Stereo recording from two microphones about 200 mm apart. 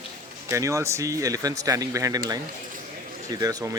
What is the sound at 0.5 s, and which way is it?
Speech, 15° right (ahead or behind).